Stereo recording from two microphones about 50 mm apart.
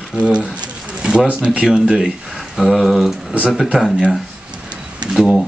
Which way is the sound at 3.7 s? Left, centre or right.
Centre.